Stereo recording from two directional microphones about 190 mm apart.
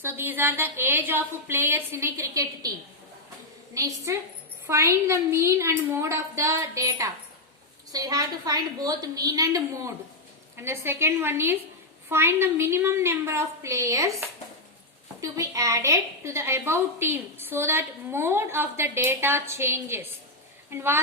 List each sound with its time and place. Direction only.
0.0 s a woman's voice: 10° right (ahead or behind)
3.8 s a woman's voice: 15° right (ahead or behind)
15.2 s a woman's voice: 15° right (ahead or behind)